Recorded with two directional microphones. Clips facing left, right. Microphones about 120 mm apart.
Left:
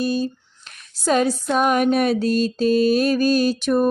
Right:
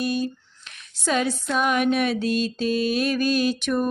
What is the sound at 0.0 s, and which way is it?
Female singing, 30° left (ahead or behind).